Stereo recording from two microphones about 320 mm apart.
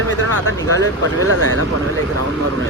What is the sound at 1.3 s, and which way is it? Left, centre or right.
Speech, right.